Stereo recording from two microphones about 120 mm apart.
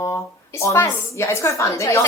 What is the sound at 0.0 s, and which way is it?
Speech, 25° left (ahead or behind).